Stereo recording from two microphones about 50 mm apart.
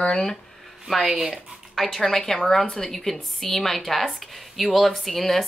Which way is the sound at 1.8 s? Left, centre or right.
Centre.